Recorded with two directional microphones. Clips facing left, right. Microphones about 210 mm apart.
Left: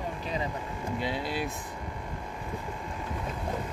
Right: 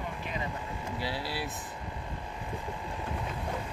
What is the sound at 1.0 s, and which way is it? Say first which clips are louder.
Speech: left 3 dB; 20° left (ahead or behind).